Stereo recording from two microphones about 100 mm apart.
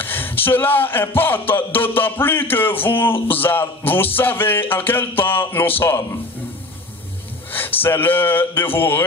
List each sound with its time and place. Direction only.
0.0 s speech: 20° left (ahead or behind)
7.5 s speech: 20° left (ahead or behind)